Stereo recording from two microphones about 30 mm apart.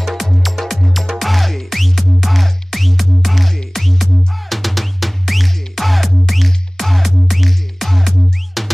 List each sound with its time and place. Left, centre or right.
0.0 s music: centre